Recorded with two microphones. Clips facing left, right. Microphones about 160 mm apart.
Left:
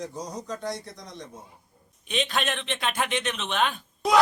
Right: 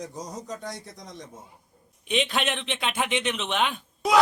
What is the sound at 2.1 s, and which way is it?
Speech, 20° right (ahead or behind).